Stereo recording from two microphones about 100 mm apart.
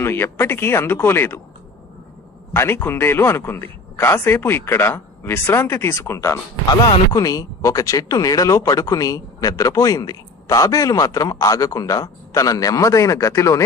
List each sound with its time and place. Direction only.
0.0 s speech: 25° left (ahead or behind)
2.5 s speech: 20° left (ahead or behind)